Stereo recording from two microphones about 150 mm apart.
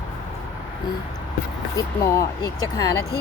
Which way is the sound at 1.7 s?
25° left (ahead or behind).